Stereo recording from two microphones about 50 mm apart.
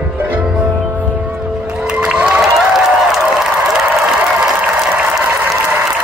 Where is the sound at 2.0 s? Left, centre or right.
Right.